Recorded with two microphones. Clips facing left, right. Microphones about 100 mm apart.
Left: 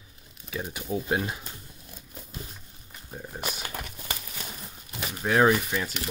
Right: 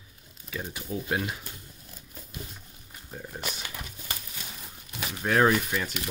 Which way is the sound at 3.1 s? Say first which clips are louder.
Left 1 dB; 15° left (ahead or behind).